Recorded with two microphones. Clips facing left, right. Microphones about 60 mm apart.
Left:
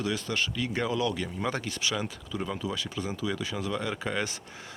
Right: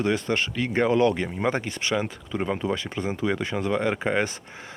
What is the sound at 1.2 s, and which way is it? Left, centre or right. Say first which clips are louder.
Speech: right 6 dB; right.